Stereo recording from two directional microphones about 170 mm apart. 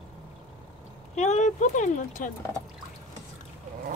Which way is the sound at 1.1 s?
45° left (ahead or behind).